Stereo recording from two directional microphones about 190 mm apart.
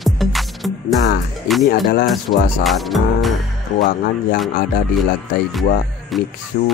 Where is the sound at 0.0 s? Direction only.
Centre (ahead or behind).